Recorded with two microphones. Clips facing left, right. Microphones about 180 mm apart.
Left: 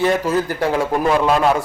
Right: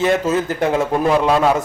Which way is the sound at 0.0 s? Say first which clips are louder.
Right 1 dB; 20° right (ahead or behind).